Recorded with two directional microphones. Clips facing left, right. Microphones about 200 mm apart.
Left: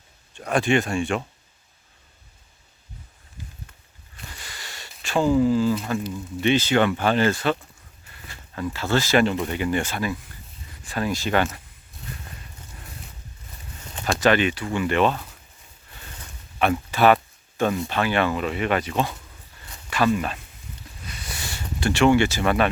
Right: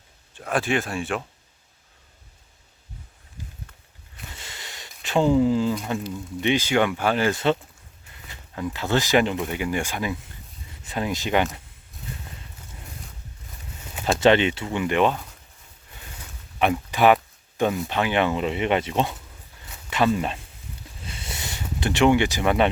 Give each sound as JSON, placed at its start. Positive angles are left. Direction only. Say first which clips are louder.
{"t": 0.3, "sound": "speech", "louder": "left 3 dB", "side_deg": 0}
{"t": 4.3, "sound": "a sound", "louder": "even", "side_deg": -25}
{"t": 6.4, "sound": "speech", "louder": "left 2 dB", "side_deg": -15}
{"t": 7.3, "sound": "speech", "louder": "right 2 dB", "side_deg": -20}
{"t": 14.2, "sound": "speech", "louder": "right 2 dB", "side_deg": -25}
{"t": 16.6, "sound": "speech", "louder": "even", "side_deg": -15}
{"t": 21.0, "sound": "a sound", "louder": "right 1 dB", "side_deg": -25}
{"t": 21.8, "sound": "speech", "louder": "left 1 dB", "side_deg": -20}